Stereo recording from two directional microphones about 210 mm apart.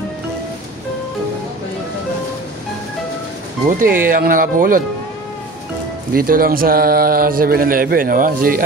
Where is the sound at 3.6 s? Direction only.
40° right (ahead or behind).